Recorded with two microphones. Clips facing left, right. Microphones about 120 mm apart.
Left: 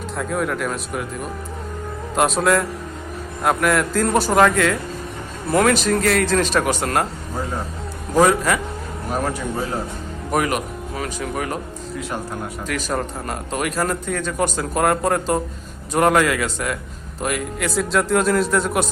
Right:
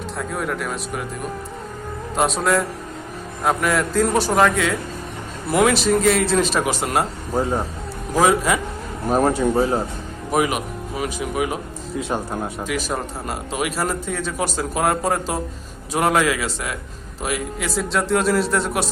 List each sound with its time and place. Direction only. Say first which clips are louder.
0.2 s speech: left 3 dB; centre (ahead or behind)
8.2 s a man's voice: left 1 dB; 10° right (ahead or behind)
9.0 s speech: right 7 dB; 30° right (ahead or behind)
10.3 s speech: right 1 dB; 10° right (ahead or behind)
11.9 s speech: right 4 dB; 25° right (ahead or behind)
12.6 s speech: left 1 dB; 5° right (ahead or behind)